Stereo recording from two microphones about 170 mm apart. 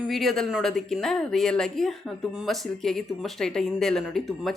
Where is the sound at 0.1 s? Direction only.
Centre (ahead or behind).